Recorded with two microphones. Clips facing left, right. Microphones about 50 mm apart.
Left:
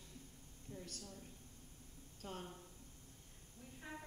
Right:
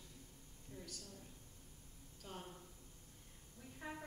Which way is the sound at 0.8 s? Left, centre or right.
Left.